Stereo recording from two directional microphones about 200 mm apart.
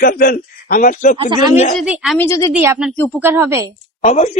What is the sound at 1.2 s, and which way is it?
Speech, 25° right (ahead or behind).